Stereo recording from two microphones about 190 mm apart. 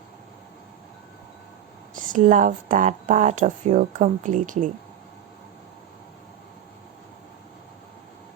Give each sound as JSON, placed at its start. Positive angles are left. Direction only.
{"t": 2.0, "sound": "speech", "side_deg": -45}